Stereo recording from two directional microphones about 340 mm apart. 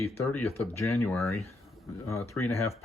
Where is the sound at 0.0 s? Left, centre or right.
Centre.